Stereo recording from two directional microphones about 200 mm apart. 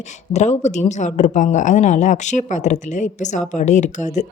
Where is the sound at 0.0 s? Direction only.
35° left (ahead or behind).